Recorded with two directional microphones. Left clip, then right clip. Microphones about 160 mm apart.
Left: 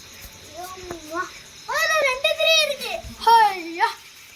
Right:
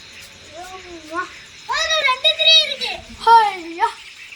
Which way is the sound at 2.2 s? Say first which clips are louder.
Right 7 dB; 55° left (ahead or behind).